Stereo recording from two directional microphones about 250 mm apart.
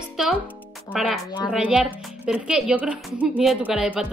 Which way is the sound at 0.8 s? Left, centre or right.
Centre.